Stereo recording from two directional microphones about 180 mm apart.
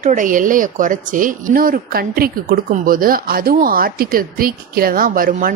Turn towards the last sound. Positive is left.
turn(degrees=-50)  # may be behind; listen again after turning